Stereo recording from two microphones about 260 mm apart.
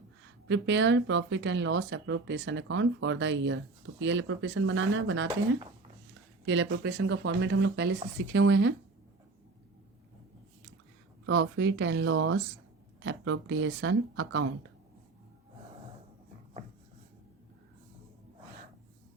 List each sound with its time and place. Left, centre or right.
0.4 s speech: right
6.4 s speech: right
11.3 s speech: right